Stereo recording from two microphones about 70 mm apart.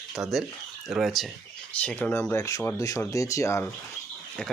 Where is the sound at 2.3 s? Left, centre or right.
Left.